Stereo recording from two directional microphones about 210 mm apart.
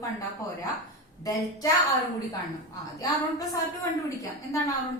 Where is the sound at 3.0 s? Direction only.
15° left (ahead or behind).